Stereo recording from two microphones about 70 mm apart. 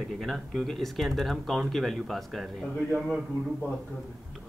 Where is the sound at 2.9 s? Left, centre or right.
Centre.